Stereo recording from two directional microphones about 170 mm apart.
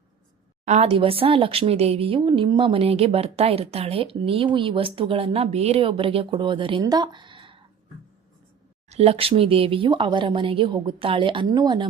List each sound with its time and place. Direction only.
0.6 s a woman's voice: 40° right (ahead or behind)
8.9 s speech: 35° right (ahead or behind)